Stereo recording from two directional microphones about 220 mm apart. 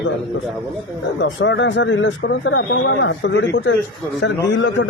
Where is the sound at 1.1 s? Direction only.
55° left (ahead or behind).